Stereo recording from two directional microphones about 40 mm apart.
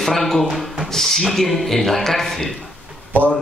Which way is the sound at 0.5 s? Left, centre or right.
Centre.